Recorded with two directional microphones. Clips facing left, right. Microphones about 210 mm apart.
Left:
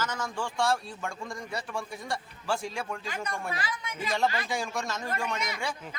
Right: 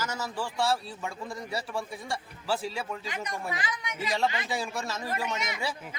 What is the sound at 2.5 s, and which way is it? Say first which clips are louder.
Speech: right 1 dB; 5° right (ahead or behind).